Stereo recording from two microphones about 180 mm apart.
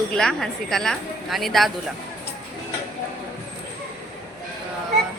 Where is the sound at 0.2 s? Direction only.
Centre (ahead or behind).